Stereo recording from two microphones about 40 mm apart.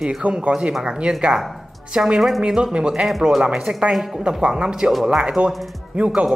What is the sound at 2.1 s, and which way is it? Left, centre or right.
Speech, centre.